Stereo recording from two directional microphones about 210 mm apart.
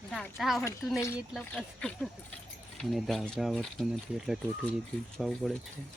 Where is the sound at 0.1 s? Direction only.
Centre (ahead or behind).